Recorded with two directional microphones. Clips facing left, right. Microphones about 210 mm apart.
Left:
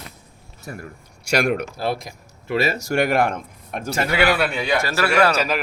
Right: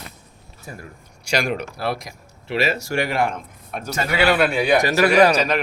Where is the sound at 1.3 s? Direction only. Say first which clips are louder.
Left 3 dB; 60° left (ahead or behind).